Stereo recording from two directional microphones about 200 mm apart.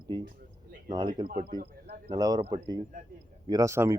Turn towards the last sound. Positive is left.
turn(degrees=-15)  # may be behind; listen again after turning